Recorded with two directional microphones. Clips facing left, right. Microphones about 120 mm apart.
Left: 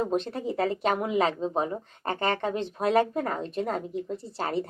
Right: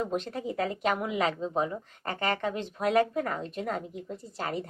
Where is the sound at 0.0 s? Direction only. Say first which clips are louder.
Left 3 dB; 30° left (ahead or behind).